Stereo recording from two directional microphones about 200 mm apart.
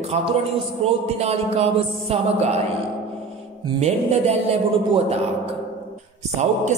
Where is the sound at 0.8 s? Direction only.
30° right (ahead or behind).